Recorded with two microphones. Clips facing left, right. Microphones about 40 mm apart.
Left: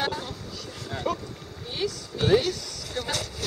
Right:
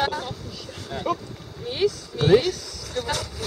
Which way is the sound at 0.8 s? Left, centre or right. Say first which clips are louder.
Right 3 dB; centre.